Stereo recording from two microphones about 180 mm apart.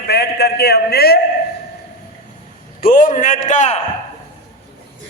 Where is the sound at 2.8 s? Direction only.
45° left (ahead or behind).